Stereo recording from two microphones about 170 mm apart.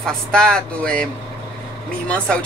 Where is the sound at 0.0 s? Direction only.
5° left (ahead or behind).